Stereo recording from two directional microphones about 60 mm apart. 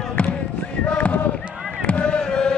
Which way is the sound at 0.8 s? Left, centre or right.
Centre.